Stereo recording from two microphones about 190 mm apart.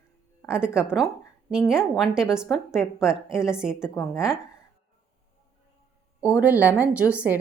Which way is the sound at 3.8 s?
15° left (ahead or behind).